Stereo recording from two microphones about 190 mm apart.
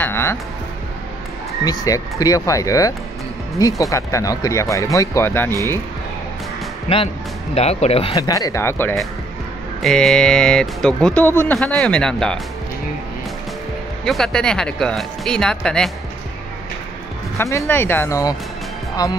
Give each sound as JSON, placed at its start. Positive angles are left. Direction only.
{"t": 0.0, "sound": "speech", "side_deg": 10}
{"t": 1.6, "sound": "speech", "side_deg": 20}
{"t": 7.5, "sound": "speech", "side_deg": 35}
{"t": 8.2, "sound": "speech", "side_deg": 20}
{"t": 9.8, "sound": "speech", "side_deg": 0}
{"t": 14.0, "sound": "speech", "side_deg": 0}
{"t": 17.4, "sound": "speech", "side_deg": 15}